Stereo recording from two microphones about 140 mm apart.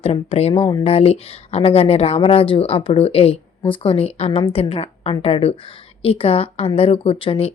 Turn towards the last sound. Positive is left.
turn(degrees=40)  # may be behind; listen again after turning